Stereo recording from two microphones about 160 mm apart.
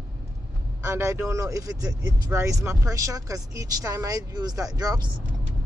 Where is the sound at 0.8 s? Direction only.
15° right (ahead or behind).